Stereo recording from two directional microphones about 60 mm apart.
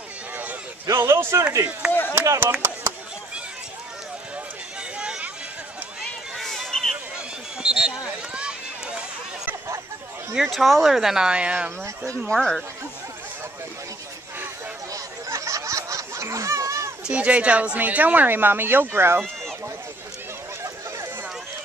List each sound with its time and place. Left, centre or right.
0.9 s a man's voice: right
1.9 s speech: left
2.6 s chop: right
4.9 s a sound: centre
6.3 s a sound: centre
7.2 s run: centre
10.3 s speech: centre
12.3 s speech: centre
14.9 s a sound: right
17.0 s speech: right